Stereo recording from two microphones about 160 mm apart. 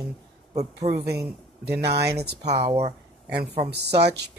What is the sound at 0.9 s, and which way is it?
Speech, 85° right.